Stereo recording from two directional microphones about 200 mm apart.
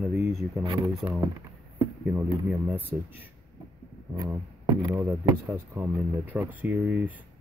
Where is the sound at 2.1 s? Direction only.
10° right (ahead or behind).